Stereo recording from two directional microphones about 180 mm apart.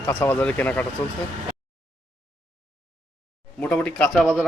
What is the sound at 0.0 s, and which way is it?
Speech, 10° left (ahead or behind).